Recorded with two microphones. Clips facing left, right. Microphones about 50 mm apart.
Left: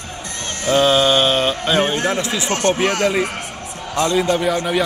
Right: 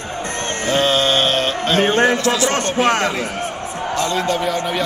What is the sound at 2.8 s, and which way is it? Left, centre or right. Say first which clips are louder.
Chant: right 1 dB; right.